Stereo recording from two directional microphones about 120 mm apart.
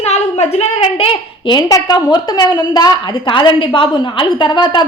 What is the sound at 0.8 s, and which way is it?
A child's voice, 45° left (ahead or behind).